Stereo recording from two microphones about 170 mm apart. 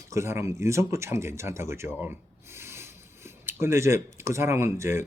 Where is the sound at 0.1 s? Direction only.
15° right (ahead or behind).